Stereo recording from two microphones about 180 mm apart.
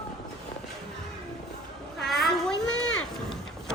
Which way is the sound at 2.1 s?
Centre (ahead or behind).